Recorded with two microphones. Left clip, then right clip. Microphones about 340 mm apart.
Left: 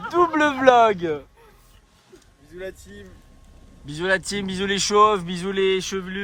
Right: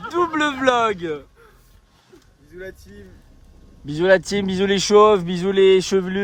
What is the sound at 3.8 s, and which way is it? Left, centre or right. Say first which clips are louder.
Speech: right 7 dB; centre.